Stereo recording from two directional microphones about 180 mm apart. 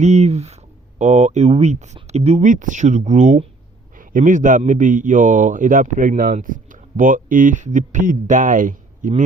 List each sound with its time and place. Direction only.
0.0 s a man's voice: 40° right (ahead or behind)